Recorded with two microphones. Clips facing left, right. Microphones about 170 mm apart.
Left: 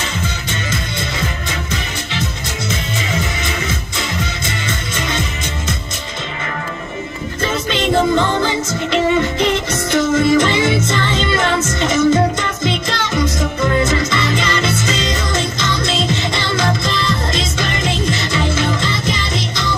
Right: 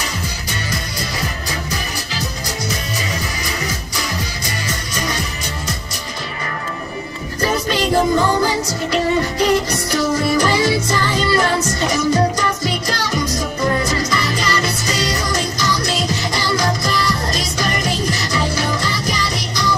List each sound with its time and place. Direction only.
4.9 s music: 25° left (ahead or behind)
7.4 s music: 25° left (ahead or behind)
11.4 s music: 35° right (ahead or behind)
11.8 s music: 25° left (ahead or behind)